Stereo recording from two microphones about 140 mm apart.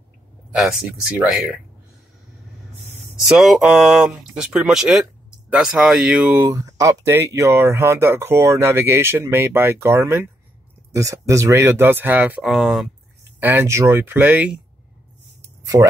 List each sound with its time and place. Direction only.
0.6 s speech: 5° right (ahead or behind)
3.3 s speech: 5° right (ahead or behind)
6.4 s speech: 25° right (ahead or behind)
12.4 s speech: centre (ahead or behind)
13.4 s speech: 15° right (ahead or behind)
15.6 s speech: 25° right (ahead or behind)